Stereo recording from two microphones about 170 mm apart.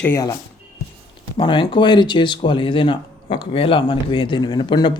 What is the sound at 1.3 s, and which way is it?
Speech, 30° left (ahead or behind).